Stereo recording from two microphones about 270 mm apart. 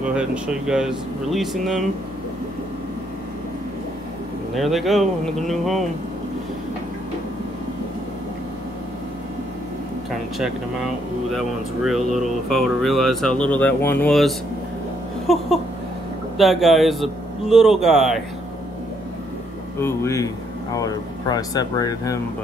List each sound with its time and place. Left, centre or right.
0.0 s speech: centre
4.6 s speech: centre
11.3 s speech: centre
19.8 s speech: centre